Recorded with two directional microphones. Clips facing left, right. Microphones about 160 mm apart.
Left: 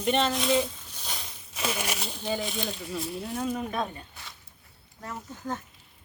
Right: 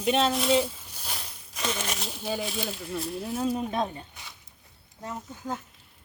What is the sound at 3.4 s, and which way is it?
Speech, 25° right (ahead or behind).